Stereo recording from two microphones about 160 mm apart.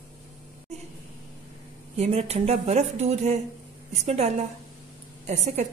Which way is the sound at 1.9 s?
40° right (ahead or behind).